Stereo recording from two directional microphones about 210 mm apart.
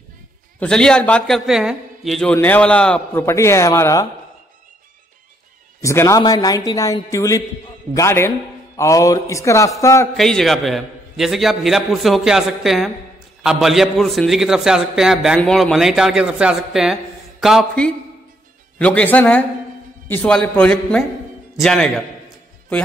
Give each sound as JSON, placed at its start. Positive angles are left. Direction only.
{"t": 0.6, "sound": "a man's voice", "side_deg": 5}
{"t": 5.8, "sound": "a man's voice", "side_deg": 15}
{"t": 10.1, "sound": "a man's voice", "side_deg": 0}